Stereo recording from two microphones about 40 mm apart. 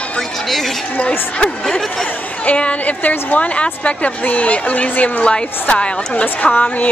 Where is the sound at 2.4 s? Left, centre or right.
Left.